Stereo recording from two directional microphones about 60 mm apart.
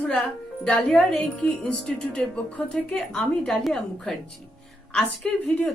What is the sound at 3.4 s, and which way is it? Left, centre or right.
Speech, centre.